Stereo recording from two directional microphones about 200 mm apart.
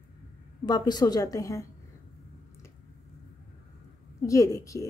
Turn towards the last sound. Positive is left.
turn(degrees=15)  # may be behind; listen again after turning